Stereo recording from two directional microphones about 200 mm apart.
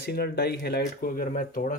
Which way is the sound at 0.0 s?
50° left (ahead or behind).